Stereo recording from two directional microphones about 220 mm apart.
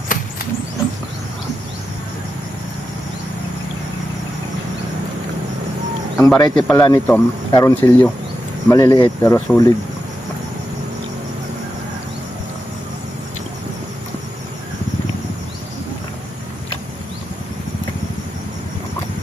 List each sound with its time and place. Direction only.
6.1 s speech: 15° left (ahead or behind)
6.8 s speech: 15° left (ahead or behind)